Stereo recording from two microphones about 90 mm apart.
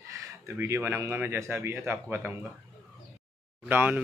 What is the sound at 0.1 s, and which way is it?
Speech, 35° right (ahead or behind).